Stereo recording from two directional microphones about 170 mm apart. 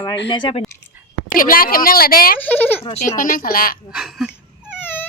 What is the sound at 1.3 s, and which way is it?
A woman's voice, 55° left (ahead or behind).